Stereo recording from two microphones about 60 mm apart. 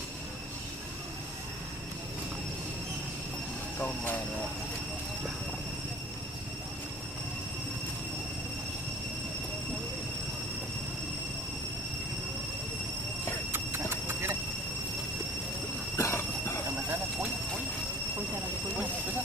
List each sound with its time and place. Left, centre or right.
3.8 s speech: left
13.5 s horse: right
16.0 s train: left